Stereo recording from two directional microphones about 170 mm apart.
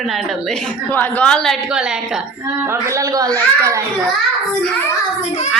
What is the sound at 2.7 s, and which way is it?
A child's voice, 15° right (ahead or behind).